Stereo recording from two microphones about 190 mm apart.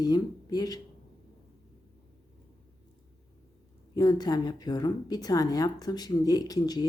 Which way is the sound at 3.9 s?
20° left (ahead or behind).